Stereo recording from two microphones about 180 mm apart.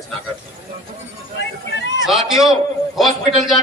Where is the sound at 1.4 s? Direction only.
80° left.